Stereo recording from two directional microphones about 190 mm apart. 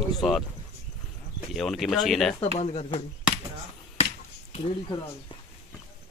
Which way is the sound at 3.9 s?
35° left (ahead or behind).